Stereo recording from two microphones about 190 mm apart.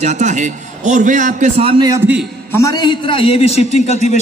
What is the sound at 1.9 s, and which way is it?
Speech, 5° right (ahead or behind).